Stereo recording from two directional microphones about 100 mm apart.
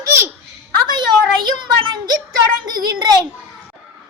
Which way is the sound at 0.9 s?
50° right (ahead or behind).